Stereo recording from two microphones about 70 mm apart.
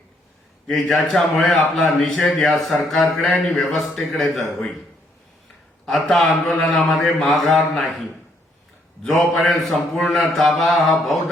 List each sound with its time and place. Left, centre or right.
0.7 s speech: centre
2.1 s a man's voice: centre
2.4 s speech: centre
5.8 s speech: centre
9.0 s speech: centre